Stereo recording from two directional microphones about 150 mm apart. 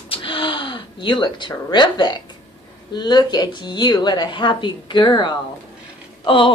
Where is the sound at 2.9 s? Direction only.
30° left (ahead or behind).